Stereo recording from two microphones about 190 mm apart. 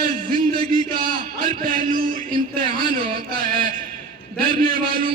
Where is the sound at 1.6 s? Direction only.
45° right (ahead or behind).